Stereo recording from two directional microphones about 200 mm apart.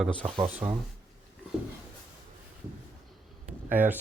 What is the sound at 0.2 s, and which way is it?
Speech, 25° right (ahead or behind).